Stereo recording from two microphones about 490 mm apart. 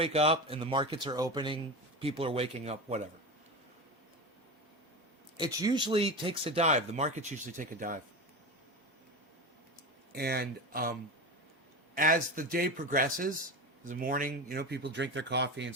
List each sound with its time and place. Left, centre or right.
0.0 s speech: centre
5.4 s speech: centre
10.1 s speech: centre
11.9 s speech: centre